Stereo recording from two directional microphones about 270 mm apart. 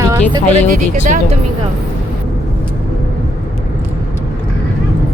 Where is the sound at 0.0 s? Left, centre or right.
Centre.